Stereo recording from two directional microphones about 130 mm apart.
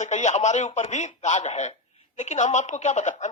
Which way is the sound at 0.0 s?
65° left (ahead or behind).